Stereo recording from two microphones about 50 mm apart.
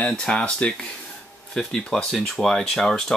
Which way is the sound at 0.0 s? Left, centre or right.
Centre.